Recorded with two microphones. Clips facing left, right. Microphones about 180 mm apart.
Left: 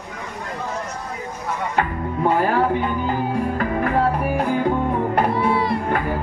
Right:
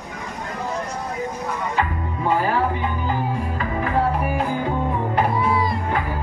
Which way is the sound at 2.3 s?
60° left (ahead or behind).